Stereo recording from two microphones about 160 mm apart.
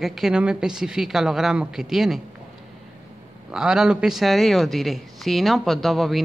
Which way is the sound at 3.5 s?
5° right (ahead or behind).